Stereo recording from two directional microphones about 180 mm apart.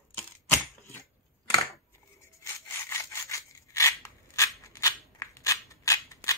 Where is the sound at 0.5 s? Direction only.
15° left (ahead or behind).